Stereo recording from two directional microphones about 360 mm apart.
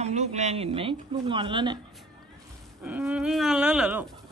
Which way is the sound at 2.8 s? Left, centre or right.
Centre.